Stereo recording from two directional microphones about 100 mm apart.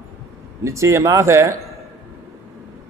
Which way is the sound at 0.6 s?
30° right (ahead or behind).